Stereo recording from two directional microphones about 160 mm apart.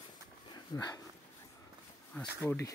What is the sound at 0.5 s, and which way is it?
Speech, 20° left (ahead or behind).